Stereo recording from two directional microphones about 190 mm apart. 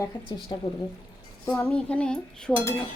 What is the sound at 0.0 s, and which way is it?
Speech, 25° left (ahead or behind).